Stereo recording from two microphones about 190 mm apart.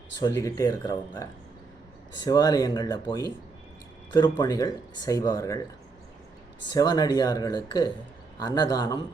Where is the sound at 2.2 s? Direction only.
20° left (ahead or behind).